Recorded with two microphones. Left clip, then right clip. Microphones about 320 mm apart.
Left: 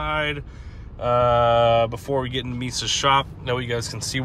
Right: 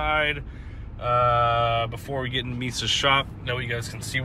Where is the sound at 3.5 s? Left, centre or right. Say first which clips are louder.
Left 4 dB; centre.